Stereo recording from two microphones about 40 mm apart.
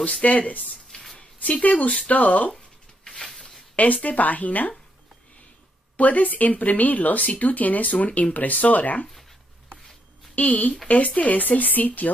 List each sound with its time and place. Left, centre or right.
0.0 s speech: left
0.9 s a sound: left
1.6 s speech: left
2.5 s a sound: centre
3.7 s speech: left
5.9 s speech: left
10.3 s speech: left